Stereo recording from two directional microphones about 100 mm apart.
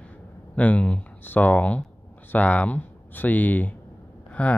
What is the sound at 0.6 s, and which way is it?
Speech, 15° left (ahead or behind).